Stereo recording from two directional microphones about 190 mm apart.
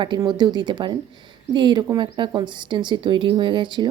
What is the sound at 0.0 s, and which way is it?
Speech, 25° right (ahead or behind).